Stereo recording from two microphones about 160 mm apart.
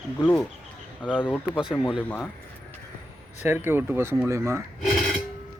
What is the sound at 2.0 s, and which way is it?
Speech, 10° left (ahead or behind).